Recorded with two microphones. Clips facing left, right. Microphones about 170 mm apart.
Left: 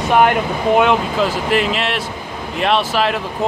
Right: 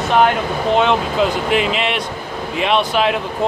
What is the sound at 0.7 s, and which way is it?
Speech, 5° left (ahead or behind).